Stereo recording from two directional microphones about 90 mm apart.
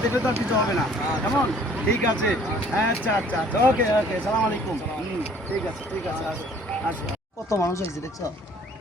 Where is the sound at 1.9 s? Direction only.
15° left (ahead or behind).